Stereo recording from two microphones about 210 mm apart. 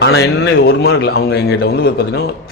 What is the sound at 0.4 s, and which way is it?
Speech, 50° left (ahead or behind).